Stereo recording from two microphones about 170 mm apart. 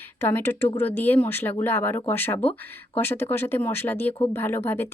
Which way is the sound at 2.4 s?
35° left (ahead or behind).